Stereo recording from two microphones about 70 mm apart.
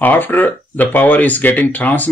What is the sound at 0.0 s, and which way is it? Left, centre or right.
Speech, left.